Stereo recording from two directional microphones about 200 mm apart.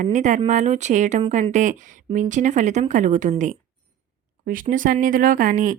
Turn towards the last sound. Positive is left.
turn(degrees=-40)  # may be behind; listen again after turning